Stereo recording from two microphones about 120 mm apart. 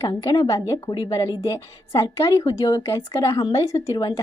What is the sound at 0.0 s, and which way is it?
A woman's voice, 25° left (ahead or behind).